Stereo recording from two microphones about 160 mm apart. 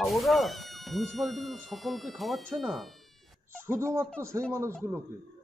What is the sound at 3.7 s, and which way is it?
Speech, 15° right (ahead or behind).